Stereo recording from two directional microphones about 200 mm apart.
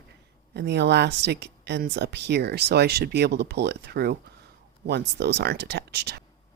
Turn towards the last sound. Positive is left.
turn(degrees=-55)  # may be behind; listen again after turning